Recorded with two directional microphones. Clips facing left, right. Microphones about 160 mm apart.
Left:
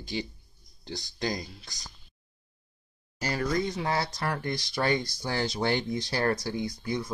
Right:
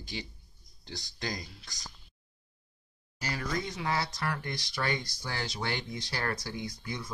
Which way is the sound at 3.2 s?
35° left (ahead or behind).